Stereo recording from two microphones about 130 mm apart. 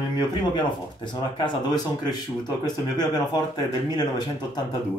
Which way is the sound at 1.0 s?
35° left (ahead or behind).